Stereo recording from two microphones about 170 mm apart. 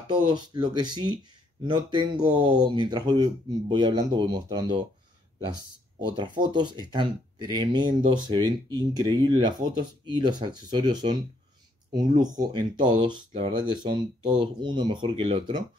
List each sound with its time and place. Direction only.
0.1 s speech: 25° right (ahead or behind)
5.9 s speech: 25° right (ahead or behind)